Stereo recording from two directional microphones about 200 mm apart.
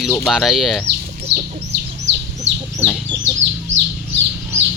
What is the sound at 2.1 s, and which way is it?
Chicken, 60° right (ahead or behind).